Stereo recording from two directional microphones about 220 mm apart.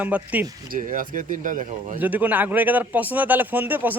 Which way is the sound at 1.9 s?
10° right (ahead or behind).